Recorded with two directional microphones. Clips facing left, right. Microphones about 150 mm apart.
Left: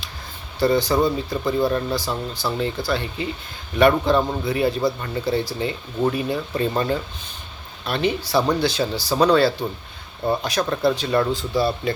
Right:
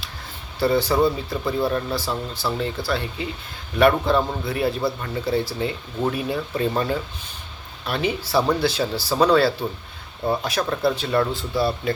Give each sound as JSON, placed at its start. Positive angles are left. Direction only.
{"t": 0.6, "sound": "speech", "side_deg": -5}